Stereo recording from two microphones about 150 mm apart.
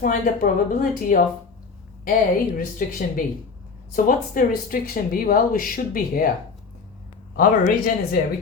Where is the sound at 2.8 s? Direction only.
75° left (ahead or behind).